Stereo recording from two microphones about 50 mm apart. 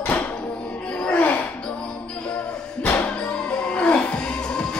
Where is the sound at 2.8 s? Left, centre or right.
Left.